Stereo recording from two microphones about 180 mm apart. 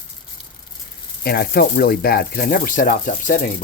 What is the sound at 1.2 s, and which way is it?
Speech, 55° left (ahead or behind).